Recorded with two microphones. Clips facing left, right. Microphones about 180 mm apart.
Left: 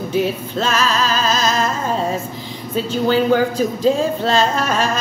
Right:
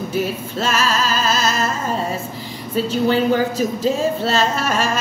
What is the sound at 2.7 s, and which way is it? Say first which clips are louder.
Speech: even; 5° right (ahead or behind).